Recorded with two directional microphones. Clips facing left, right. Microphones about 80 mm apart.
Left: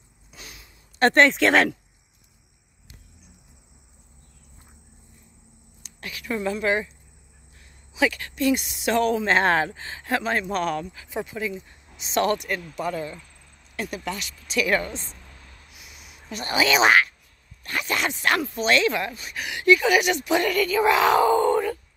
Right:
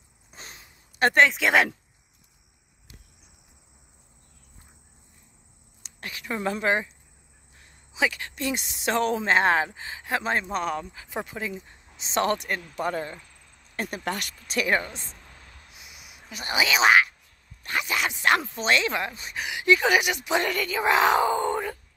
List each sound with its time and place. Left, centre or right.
0.3 s a sound: right
0.9 s speech: centre
5.8 s a sound: right
7.9 s speech: right
9.2 s speech: centre
10.2 s speech: right
14.1 s speech: right
14.7 s speech: centre
15.9 s a sound: centre
17.8 s a sound: centre
18.2 s speech: right
20.0 s speech: centre